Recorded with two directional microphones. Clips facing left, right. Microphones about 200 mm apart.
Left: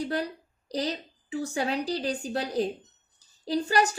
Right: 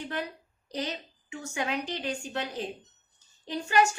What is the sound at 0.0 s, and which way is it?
A woman's voice, 35° left (ahead or behind).